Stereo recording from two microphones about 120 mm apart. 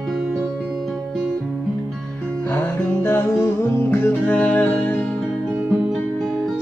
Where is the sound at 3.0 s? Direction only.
20° left (ahead or behind).